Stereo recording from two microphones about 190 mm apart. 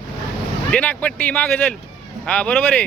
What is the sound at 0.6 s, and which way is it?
Speech, 5° left (ahead or behind).